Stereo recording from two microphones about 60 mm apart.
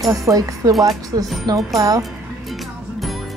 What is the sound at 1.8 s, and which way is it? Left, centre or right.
Speech, right.